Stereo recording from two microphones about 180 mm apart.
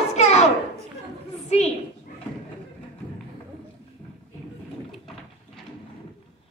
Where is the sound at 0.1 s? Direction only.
35° left (ahead or behind).